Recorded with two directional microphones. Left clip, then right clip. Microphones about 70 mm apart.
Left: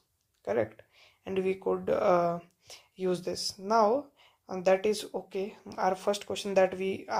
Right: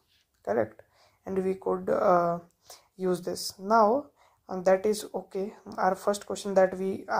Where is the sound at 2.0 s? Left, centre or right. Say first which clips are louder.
Right 3 dB; right.